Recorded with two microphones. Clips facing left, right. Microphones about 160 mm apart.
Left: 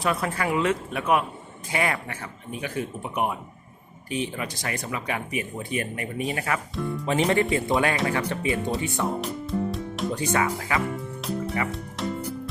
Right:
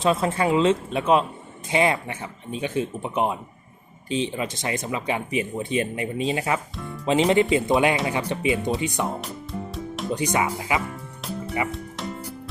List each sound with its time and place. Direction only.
0.0 s speech: 25° right (ahead or behind)
6.7 s speech: centre (ahead or behind)
7.0 s speech: 20° right (ahead or behind)
9.2 s music: centre (ahead or behind)
10.2 s speech: 15° right (ahead or behind)
11.2 s music: centre (ahead or behind)